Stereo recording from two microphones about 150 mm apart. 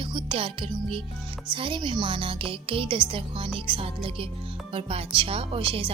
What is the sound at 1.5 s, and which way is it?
A woman's voice, 35° right (ahead or behind).